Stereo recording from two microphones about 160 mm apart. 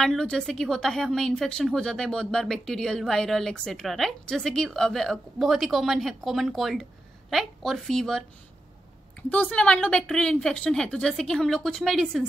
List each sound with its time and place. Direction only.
0.0 s a woman's voice: 5° left (ahead or behind)
9.3 s a woman's voice: 10° left (ahead or behind)